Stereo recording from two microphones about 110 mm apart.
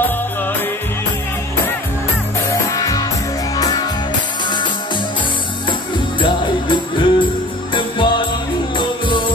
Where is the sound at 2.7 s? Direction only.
35° left (ahead or behind).